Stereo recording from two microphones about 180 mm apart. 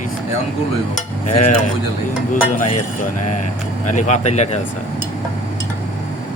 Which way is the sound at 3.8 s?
40° left (ahead or behind).